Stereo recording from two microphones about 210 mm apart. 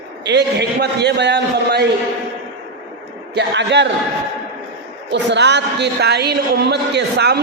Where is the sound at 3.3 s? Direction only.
55° right (ahead or behind).